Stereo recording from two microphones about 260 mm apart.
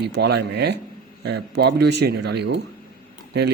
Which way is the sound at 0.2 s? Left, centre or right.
Right.